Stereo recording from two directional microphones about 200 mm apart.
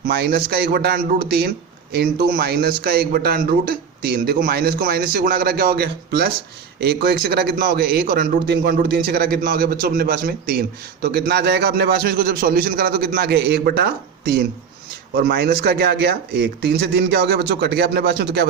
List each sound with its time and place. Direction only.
0.1 s a man's voice: 50° right (ahead or behind)